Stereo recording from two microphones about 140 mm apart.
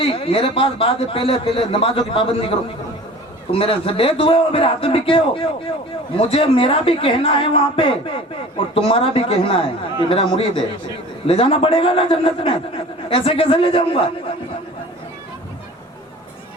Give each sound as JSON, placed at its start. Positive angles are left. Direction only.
{"t": 0.0, "sound": "a man's voice", "side_deg": 40}